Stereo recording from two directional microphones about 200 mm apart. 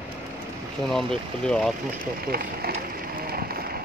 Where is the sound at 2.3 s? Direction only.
50° right (ahead or behind).